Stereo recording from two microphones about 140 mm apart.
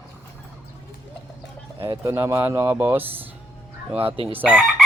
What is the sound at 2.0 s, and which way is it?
Speech, 20° right (ahead or behind).